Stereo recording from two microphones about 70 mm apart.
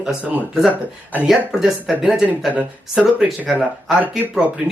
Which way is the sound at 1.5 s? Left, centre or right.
Centre.